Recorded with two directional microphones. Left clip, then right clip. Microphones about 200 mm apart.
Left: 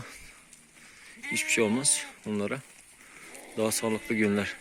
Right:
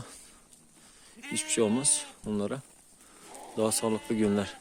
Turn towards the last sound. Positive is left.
turn(degrees=-5)  # may be behind; listen again after turning